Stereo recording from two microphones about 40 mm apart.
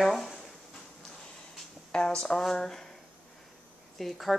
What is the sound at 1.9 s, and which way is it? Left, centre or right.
Speech, left.